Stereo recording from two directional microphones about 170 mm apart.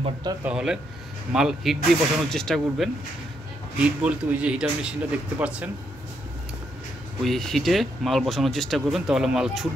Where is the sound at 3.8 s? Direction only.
10° right (ahead or behind).